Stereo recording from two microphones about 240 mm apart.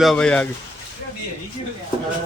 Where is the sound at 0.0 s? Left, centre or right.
Centre.